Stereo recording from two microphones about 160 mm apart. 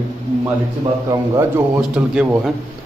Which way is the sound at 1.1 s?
20° right (ahead or behind).